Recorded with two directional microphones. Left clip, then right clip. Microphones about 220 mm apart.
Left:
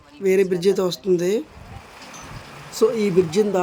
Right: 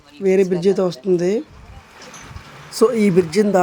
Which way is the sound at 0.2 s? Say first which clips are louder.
Right 2 dB; 5° right (ahead or behind).